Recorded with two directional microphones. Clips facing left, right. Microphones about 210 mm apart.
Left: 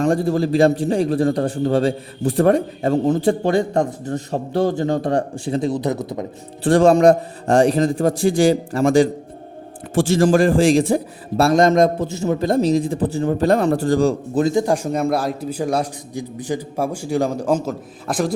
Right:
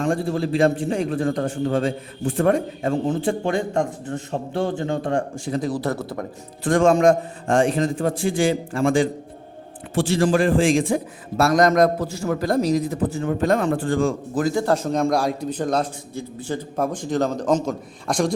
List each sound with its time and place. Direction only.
0.0 s a man's voice: 40° left (ahead or behind); by 6.2 s 20° left (ahead or behind)
6.7 s a man's voice: 35° left (ahead or behind)
14.4 s a man's voice: 15° left (ahead or behind)